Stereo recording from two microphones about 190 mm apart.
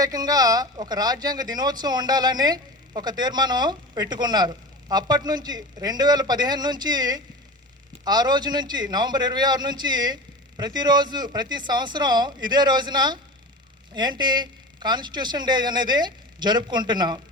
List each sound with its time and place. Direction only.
0.0 s speech: 20° right (ahead or behind)